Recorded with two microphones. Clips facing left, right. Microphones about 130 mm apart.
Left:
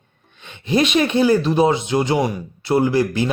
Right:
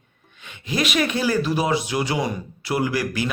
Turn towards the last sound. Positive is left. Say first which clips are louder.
# left 6 dB
turn(degrees=25)  # may be behind; listen again after turning